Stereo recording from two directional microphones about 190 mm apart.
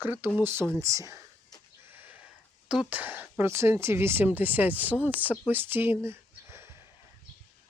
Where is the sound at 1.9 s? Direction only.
10° right (ahead or behind).